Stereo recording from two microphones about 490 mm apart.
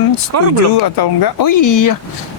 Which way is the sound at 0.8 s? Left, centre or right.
Left.